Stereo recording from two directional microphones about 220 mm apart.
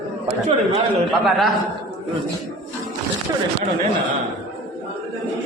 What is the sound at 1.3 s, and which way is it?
Speech, centre (ahead or behind).